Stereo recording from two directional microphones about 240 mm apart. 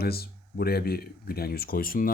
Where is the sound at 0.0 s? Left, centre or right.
Left.